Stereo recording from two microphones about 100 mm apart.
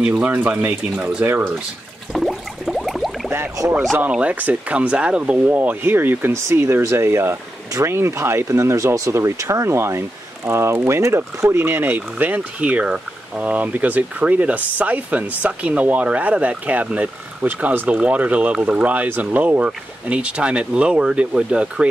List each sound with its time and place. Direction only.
0.0 s speech: 15° right (ahead or behind)
2.1 s a sound: centre (ahead or behind)
3.3 s speech: 30° right (ahead or behind)
4.1 s speech: 15° right (ahead or behind)